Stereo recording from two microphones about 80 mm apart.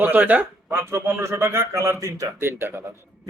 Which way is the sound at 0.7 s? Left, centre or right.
Right.